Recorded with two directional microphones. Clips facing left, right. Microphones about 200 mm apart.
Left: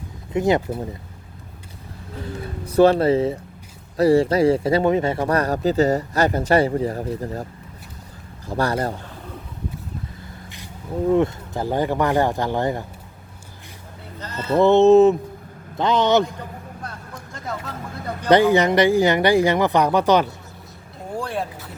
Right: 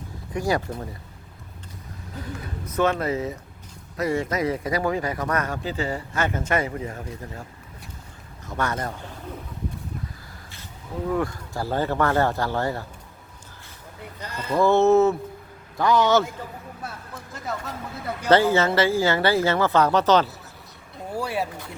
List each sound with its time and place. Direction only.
0.3 s a man's voice: 20° left (ahead or behind)
2.6 s speech: 35° left (ahead or behind)
8.4 s speech: 30° left (ahead or behind)
11.0 s speech: 25° left (ahead or behind)
14.2 s a sound: 10° right (ahead or behind)
14.5 s a man's voice: 20° left (ahead or behind)
16.8 s vehicle: 5° right (ahead or behind)
18.3 s speech: 15° left (ahead or behind)
21.2 s vehicle: 10° right (ahead or behind)